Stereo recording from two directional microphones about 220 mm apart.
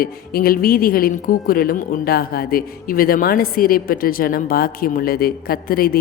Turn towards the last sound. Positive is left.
turn(degrees=40)  # may be behind; listen again after turning